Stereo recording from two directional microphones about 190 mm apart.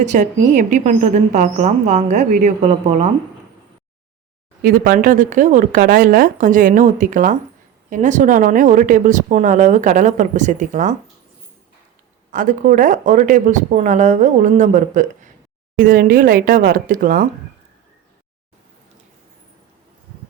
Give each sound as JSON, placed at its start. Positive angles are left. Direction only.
{"t": 0.0, "sound": "speech", "side_deg": -40}
{"t": 4.6, "sound": "speech", "side_deg": -50}
{"t": 12.3, "sound": "speech", "side_deg": -45}